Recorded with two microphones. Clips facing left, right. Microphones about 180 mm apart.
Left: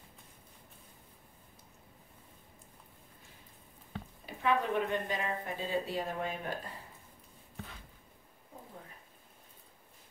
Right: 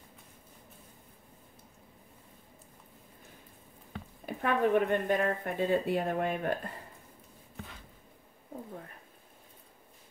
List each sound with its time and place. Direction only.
4.3 s speech: 55° right (ahead or behind)